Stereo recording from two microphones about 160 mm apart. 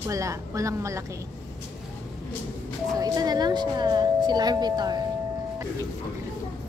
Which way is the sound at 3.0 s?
25° right (ahead or behind).